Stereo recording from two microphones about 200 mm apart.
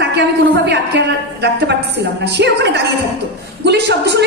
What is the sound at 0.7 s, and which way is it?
A woman's voice, 60° right (ahead or behind).